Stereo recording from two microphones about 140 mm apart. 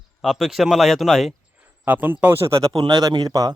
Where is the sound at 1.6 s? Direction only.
10° right (ahead or behind).